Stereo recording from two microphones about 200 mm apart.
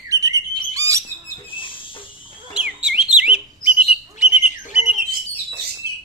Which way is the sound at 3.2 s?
5° right (ahead or behind).